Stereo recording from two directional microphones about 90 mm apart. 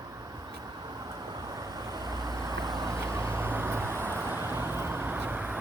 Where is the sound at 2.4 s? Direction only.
45° right (ahead or behind).